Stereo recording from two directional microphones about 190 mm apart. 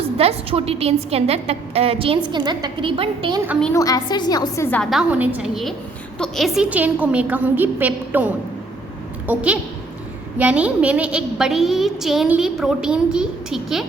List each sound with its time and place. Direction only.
0.2 s a woman's voice: 30° right (ahead or behind)
3.8 s a woman's voice: 20° left (ahead or behind)
4.9 s a woman's voice: 5° right (ahead or behind)